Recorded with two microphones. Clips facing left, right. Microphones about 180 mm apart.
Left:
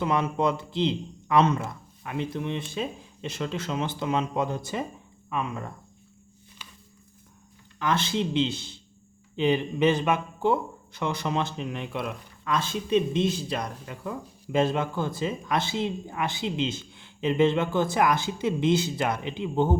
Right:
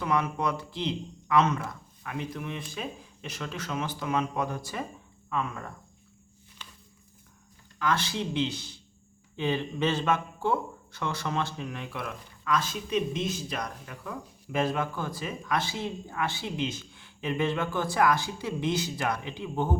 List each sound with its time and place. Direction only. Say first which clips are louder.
0.0 s speech: left 3 dB; 25° left (ahead or behind)
6.6 s a sound: even; 10° left (ahead or behind)
7.8 s speech: left 3 dB; 20° left (ahead or behind)